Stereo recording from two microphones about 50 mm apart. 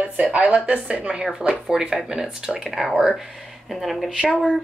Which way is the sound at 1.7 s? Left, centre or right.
Centre.